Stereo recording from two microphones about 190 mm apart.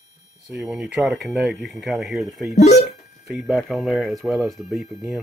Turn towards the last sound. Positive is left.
turn(degrees=0)  # may be behind; listen again after turning